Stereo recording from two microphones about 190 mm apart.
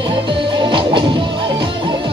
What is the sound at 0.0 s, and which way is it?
Music, 25° right (ahead or behind).